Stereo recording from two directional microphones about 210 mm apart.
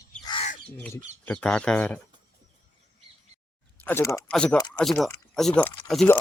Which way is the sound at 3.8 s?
10° left (ahead or behind).